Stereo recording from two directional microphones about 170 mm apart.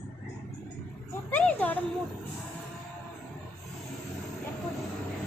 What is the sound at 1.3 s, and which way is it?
Speech, 10° left (ahead or behind).